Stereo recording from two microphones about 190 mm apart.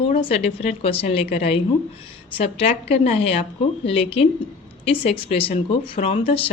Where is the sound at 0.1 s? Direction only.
35° left (ahead or behind).